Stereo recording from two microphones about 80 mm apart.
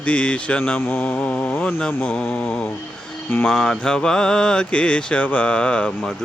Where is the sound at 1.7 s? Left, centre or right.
Centre.